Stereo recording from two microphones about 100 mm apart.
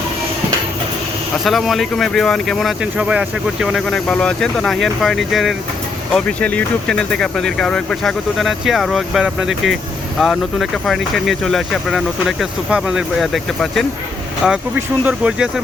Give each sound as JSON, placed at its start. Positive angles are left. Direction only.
{"t": 1.5, "sound": "speech", "side_deg": 0}
{"t": 2.8, "sound": "speech", "side_deg": -10}
{"t": 6.1, "sound": "speech", "side_deg": 10}
{"t": 14.8, "sound": "speech", "side_deg": -20}
{"t": 15.3, "sound": "speech", "side_deg": -10}